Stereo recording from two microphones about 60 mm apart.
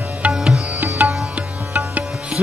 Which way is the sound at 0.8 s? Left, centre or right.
Right.